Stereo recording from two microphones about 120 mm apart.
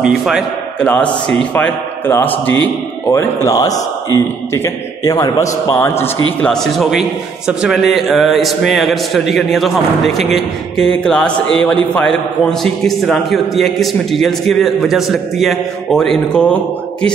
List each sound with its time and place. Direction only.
0.0 s a man's voice: 5° right (ahead or behind)
0.7 s a man's voice: 10° left (ahead or behind)
3.1 s a man's voice: 25° left (ahead or behind)
6.5 s a man's voice: centre (ahead or behind)